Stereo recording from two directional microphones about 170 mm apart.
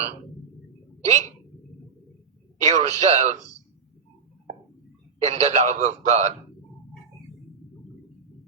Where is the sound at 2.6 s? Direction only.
40° right (ahead or behind).